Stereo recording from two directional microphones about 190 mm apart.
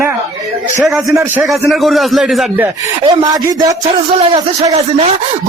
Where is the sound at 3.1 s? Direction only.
20° right (ahead or behind).